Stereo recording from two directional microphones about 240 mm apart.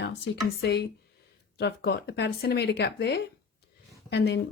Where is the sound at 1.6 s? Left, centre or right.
Left.